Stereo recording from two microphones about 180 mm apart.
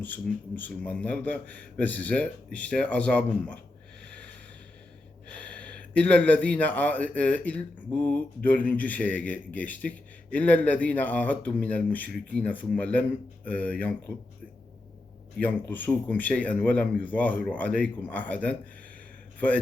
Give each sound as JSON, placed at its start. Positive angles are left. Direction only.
{"t": 0.0, "sound": "speech", "side_deg": 10}
{"t": 5.3, "sound": "speech", "side_deg": 5}
{"t": 15.4, "sound": "speech", "side_deg": 10}